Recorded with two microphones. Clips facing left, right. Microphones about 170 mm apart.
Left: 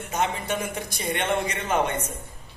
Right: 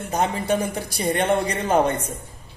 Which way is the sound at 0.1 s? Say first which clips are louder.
Right 5 dB; 35° right (ahead or behind).